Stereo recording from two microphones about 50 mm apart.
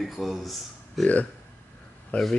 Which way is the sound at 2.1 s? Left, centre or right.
Left.